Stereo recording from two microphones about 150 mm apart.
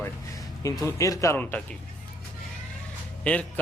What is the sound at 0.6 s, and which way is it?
Speech, 20° left (ahead or behind).